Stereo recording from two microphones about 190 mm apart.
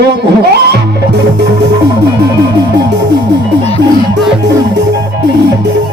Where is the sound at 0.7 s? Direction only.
60° right (ahead or behind).